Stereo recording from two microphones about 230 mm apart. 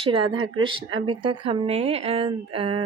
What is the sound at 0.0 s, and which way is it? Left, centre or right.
Speech, right.